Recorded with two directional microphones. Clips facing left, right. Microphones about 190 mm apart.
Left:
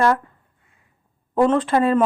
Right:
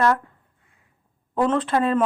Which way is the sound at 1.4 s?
5° left (ahead or behind).